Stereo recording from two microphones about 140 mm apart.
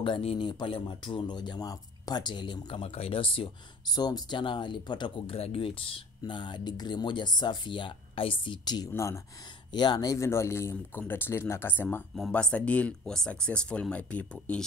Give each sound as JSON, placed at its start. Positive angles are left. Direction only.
{"t": 0.0, "sound": "speech", "side_deg": 40}
{"t": 9.7, "sound": "speech", "side_deg": 30}